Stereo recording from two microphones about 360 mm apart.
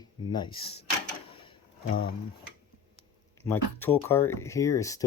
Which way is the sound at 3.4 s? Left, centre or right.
Centre.